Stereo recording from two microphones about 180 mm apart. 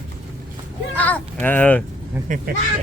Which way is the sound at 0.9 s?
10° left (ahead or behind).